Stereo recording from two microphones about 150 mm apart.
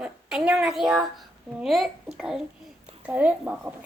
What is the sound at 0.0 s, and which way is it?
A woman's voice, 5° right (ahead or behind).